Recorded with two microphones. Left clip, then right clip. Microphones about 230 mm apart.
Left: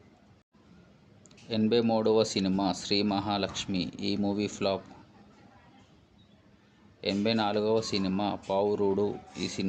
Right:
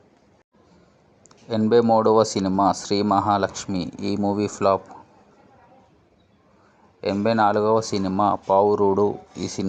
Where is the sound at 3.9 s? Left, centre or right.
Right.